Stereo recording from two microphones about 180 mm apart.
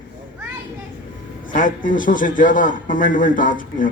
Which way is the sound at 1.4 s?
45° left (ahead or behind).